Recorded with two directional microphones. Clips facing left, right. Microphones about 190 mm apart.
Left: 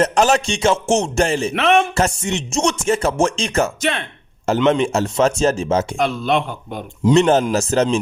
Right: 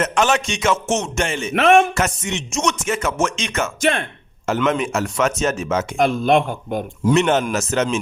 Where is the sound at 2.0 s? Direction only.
30° left (ahead or behind).